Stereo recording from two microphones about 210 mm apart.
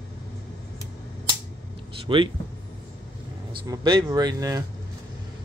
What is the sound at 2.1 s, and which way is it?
Speech, 25° right (ahead or behind).